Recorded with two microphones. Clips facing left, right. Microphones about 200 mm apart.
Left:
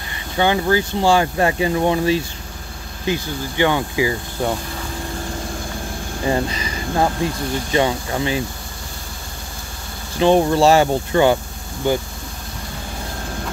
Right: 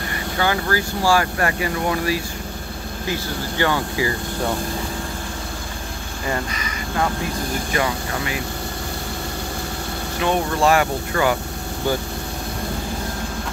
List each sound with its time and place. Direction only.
0.4 s speech: 20° left (ahead or behind)
6.2 s speech: 25° left (ahead or behind)
10.2 s speech: 30° left (ahead or behind)